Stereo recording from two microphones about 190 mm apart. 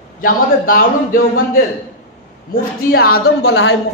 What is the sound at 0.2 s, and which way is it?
A man's voice, 50° left (ahead or behind).